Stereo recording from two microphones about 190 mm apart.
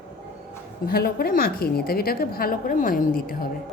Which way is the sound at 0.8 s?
55° left (ahead or behind).